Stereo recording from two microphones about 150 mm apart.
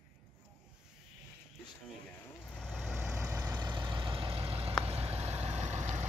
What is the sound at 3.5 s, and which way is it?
Vehicle, 30° right (ahead or behind).